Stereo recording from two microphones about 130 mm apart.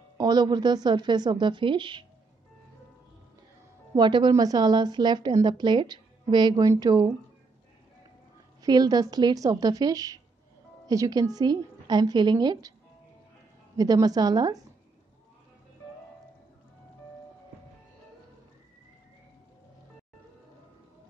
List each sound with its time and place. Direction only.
0.2 s a woman's voice: 30° right (ahead or behind)
3.9 s a woman's voice: 35° right (ahead or behind)
8.6 s a woman's voice: 30° right (ahead or behind)
13.7 s a woman's voice: 30° right (ahead or behind)